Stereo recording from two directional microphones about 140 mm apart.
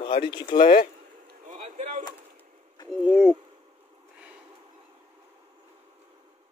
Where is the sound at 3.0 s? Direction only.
5° right (ahead or behind).